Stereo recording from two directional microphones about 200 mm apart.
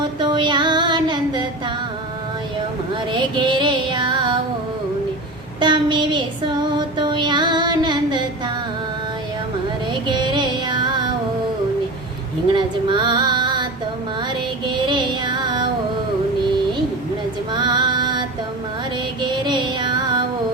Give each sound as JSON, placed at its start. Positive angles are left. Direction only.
{"t": 0.2, "sound": "music", "side_deg": -20}
{"t": 3.1, "sound": "music", "side_deg": -25}
{"t": 5.5, "sound": "child singing", "side_deg": -20}
{"t": 6.7, "sound": "music", "side_deg": -20}
{"t": 10.1, "sound": "child singing", "side_deg": -20}
{"t": 12.5, "sound": "female singing", "side_deg": -25}
{"t": 14.7, "sound": "child singing", "side_deg": -20}
{"t": 17.5, "sound": "music", "side_deg": -20}
{"t": 19.3, "sound": "music", "side_deg": -20}